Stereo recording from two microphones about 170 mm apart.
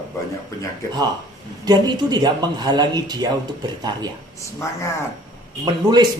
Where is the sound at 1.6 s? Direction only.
25° right (ahead or behind).